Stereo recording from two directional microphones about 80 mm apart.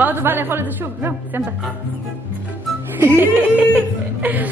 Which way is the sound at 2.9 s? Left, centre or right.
Right.